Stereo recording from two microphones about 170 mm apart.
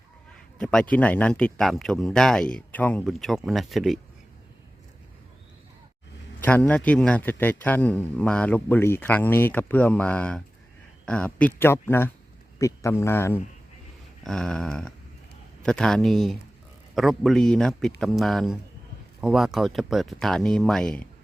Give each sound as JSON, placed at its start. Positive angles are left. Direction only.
{"t": 0.6, "sound": "speech", "side_deg": 5}
{"t": 6.4, "sound": "speech", "side_deg": 10}
{"t": 14.3, "sound": "speech", "side_deg": 5}